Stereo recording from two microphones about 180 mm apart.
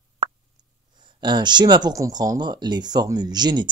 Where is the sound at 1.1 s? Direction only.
25° right (ahead or behind).